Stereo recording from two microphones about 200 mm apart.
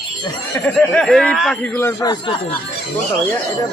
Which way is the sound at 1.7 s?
15° left (ahead or behind).